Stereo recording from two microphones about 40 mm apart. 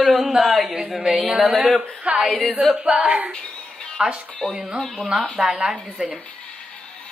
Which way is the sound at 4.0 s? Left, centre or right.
Right.